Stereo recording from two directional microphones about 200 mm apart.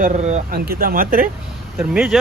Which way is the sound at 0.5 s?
45° right (ahead or behind).